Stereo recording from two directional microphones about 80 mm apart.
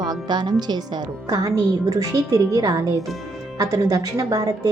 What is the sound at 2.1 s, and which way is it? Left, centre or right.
Speech, right.